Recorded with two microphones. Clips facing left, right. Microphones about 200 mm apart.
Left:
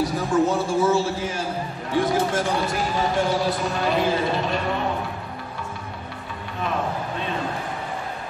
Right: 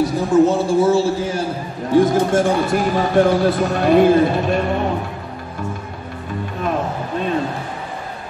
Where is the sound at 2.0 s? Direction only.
50° right (ahead or behind).